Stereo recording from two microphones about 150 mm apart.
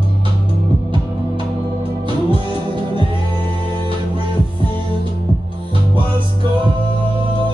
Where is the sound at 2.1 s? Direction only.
35° right (ahead or behind).